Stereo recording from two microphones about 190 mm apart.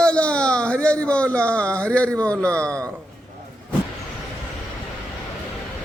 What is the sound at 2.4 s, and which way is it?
Speech, 15° right (ahead or behind).